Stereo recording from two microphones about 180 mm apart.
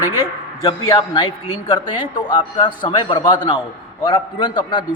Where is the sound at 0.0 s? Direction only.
20° left (ahead or behind).